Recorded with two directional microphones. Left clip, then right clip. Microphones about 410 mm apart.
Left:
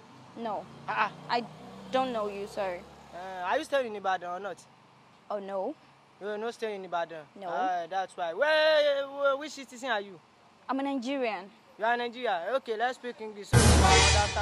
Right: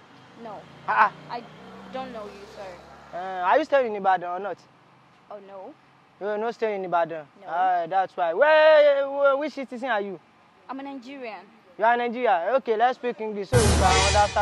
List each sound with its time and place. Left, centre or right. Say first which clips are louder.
0.8 s speech: right 10 dB; centre
1.9 s speech: left 6 dB; left
3.2 s speech: right 9 dB; right
5.3 s speech: left 7 dB; left
6.2 s speech: right 8 dB; centre
10.7 s speech: left 5 dB; left
11.8 s speech: right 8 dB; centre
13.5 s speech: right 2 dB; centre